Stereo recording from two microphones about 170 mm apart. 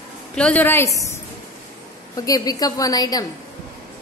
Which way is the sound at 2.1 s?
20° left (ahead or behind).